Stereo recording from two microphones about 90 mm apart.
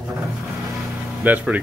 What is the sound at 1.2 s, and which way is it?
Speech, 15° right (ahead or behind).